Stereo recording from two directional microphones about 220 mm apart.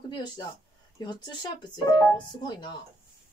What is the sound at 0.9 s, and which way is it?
A woman's voice, 20° left (ahead or behind).